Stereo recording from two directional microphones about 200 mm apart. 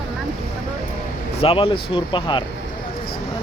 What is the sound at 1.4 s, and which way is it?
Speech, 30° left (ahead or behind).